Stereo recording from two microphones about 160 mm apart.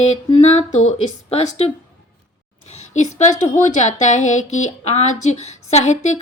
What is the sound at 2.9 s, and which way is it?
Speech, 45° left (ahead or behind).